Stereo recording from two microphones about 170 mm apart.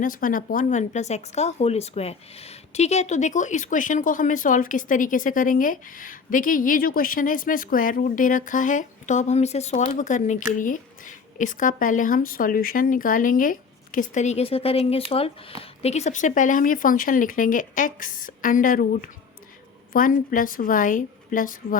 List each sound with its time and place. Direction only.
0.0 s speech: 55° left (ahead or behind)